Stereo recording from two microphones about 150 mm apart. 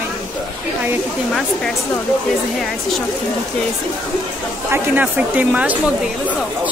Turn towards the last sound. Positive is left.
turn(degrees=-10)  # may be behind; listen again after turning